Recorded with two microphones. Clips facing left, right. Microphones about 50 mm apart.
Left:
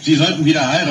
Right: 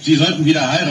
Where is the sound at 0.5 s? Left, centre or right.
Left.